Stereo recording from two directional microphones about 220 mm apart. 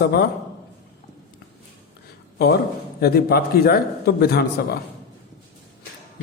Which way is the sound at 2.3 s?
45° left (ahead or behind).